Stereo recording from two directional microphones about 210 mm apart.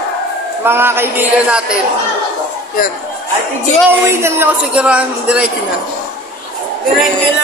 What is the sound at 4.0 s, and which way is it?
Speech, 10° right (ahead or behind).